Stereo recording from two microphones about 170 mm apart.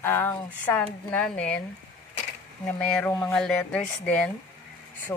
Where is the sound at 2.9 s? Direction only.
10° left (ahead or behind).